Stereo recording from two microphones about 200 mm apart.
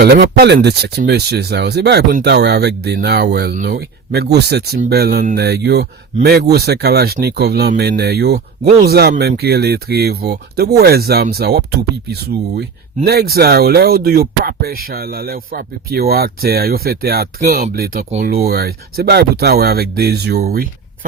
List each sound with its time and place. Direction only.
0.0 s speech: 55° right (ahead or behind)